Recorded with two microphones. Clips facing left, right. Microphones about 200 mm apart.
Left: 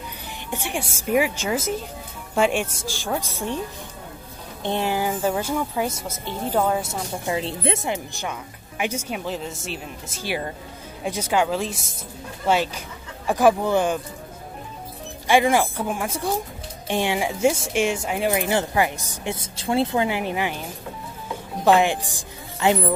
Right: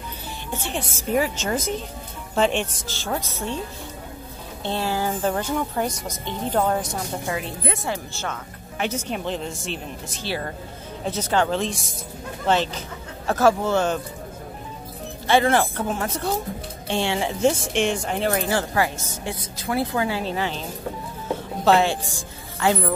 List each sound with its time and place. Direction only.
0.5 s speech: 15° left (ahead or behind)
4.6 s a woman's voice: 15° left (ahead or behind)
7.2 s speech: 25° left (ahead or behind)
15.2 s speech: 15° left (ahead or behind)
21.6 s a woman's voice: 15° left (ahead or behind)